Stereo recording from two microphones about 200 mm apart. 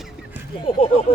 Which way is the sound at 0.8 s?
30° left (ahead or behind).